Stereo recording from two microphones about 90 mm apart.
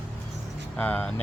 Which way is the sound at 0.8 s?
20° left (ahead or behind).